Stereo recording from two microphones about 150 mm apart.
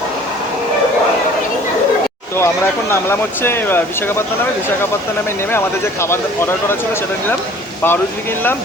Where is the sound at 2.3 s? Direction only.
15° left (ahead or behind).